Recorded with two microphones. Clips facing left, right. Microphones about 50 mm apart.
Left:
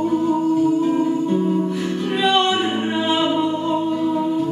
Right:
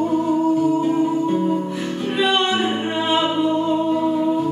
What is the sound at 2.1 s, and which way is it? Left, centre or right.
Music, centre.